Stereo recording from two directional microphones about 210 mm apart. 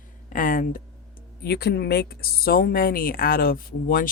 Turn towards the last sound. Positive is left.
turn(degrees=45)  # may be behind; listen again after turning